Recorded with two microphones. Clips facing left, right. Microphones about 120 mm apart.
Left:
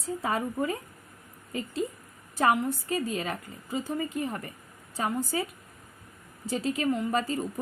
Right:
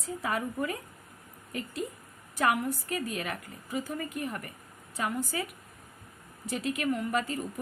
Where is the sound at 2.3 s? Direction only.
30° left (ahead or behind).